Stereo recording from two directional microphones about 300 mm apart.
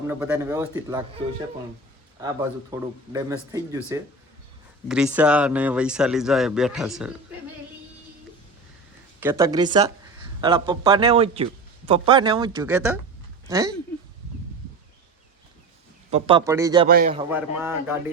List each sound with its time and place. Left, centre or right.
0.1 s speech: centre
2.2 s speech: centre
4.9 s speech: centre
9.2 s speech: centre
16.0 s speech: centre
16.9 s a man's voice: right
17.3 s speech: centre